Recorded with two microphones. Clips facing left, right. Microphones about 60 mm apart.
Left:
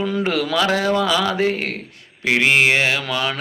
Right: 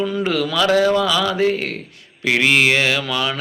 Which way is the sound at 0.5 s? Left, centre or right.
Left.